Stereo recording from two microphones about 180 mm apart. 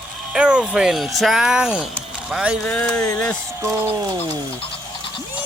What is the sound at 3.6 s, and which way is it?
Speech, 20° right (ahead or behind).